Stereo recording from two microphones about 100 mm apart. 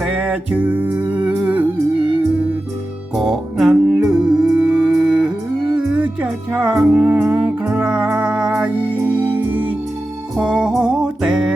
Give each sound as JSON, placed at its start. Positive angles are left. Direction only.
{"t": 0.0, "sound": "music", "side_deg": -15}
{"t": 3.2, "sound": "music", "side_deg": 0}